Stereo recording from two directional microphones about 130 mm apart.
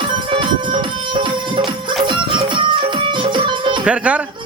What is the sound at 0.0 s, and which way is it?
Music, 40° right (ahead or behind).